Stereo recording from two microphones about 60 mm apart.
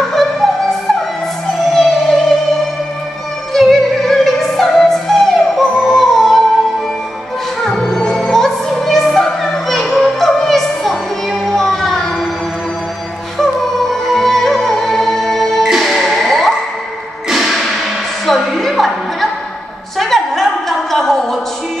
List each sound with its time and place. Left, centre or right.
0.1 s music: centre
3.5 s opera: centre
7.6 s music: centre
13.4 s music: centre
20.0 s a sound: centre